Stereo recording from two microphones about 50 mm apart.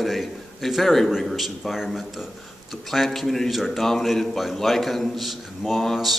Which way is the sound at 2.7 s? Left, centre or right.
Centre.